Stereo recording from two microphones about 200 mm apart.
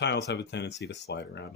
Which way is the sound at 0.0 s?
60° left (ahead or behind).